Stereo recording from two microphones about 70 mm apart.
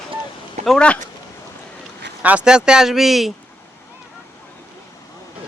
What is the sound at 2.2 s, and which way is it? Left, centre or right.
Speech, right.